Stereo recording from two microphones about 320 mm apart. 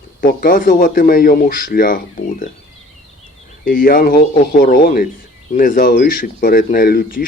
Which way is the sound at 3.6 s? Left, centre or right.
Left.